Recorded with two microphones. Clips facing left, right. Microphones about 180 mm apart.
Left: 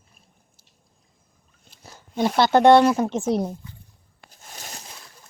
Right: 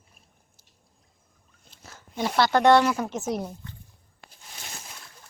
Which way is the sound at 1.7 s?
15° left (ahead or behind).